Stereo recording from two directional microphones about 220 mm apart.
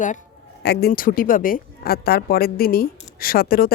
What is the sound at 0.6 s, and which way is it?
A woman's voice, 45° left (ahead or behind).